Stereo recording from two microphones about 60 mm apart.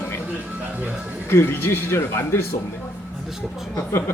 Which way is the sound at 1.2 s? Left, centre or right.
Left.